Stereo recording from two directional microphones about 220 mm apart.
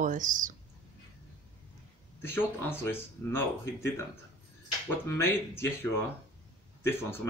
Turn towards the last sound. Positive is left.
turn(degrees=10)  # may be behind; listen again after turning